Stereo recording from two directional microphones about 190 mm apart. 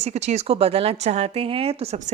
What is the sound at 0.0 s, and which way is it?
A woman's voice, 35° right (ahead or behind).